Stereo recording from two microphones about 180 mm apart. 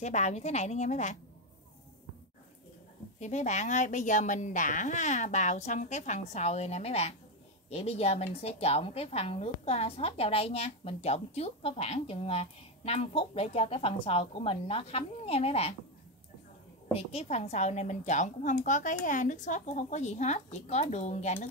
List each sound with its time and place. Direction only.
0.0 s a woman's voice: 40° left (ahead or behind)
3.2 s a woman's voice: 40° left (ahead or behind)
16.9 s a woman's voice: 35° left (ahead or behind)